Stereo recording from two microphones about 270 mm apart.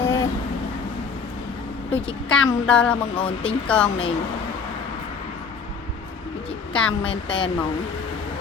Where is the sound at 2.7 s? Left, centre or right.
Centre.